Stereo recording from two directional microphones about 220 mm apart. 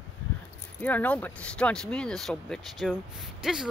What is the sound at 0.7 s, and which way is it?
Speech, 5° left (ahead or behind).